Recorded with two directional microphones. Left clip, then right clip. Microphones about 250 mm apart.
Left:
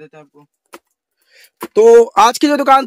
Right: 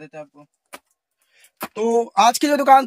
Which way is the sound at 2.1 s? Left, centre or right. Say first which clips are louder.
Left 5 dB; centre.